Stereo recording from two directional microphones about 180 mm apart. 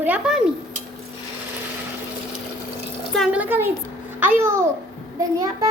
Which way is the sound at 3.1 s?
Centre (ahead or behind).